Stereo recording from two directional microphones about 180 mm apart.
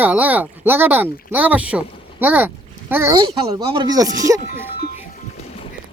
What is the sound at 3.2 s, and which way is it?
Speech, 25° right (ahead or behind).